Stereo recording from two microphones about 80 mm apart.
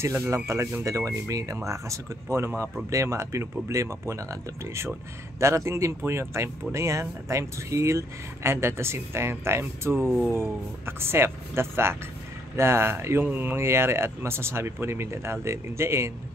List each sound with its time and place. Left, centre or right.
0.0 s speech: right